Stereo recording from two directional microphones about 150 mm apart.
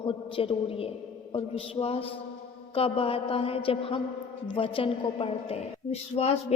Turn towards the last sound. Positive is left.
turn(degrees=45)  # may be behind; listen again after turning